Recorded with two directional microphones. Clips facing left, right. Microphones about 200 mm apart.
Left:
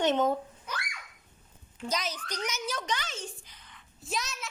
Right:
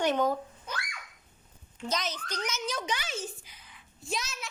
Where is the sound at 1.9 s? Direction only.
10° left (ahead or behind).